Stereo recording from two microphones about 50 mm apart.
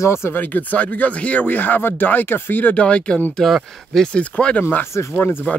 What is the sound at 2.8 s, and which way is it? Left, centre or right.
Speech, left.